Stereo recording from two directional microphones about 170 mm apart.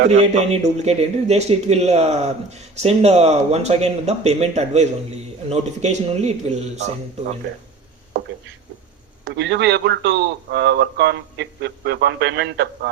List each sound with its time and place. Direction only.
0.1 s speech: 40° right (ahead or behind)
9.2 s a man's voice: 85° right